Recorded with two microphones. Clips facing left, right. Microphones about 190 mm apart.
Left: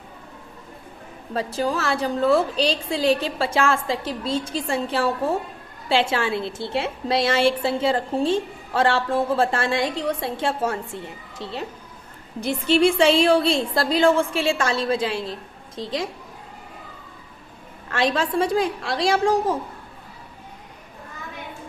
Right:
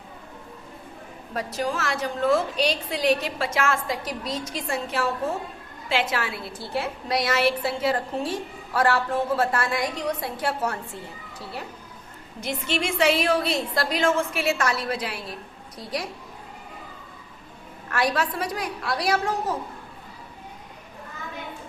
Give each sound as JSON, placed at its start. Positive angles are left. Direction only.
{"t": 1.3, "sound": "a woman's voice", "side_deg": 30}
{"t": 17.8, "sound": "a woman's voice", "side_deg": 25}